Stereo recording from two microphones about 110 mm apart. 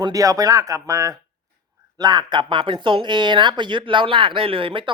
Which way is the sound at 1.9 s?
40° right (ahead or behind).